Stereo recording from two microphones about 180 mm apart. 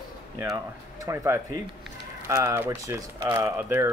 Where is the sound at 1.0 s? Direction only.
15° right (ahead or behind).